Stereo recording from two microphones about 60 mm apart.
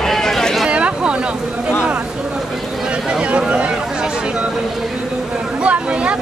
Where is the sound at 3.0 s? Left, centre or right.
Centre.